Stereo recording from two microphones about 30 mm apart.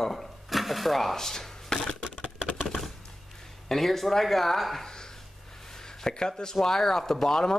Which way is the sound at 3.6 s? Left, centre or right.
Centre.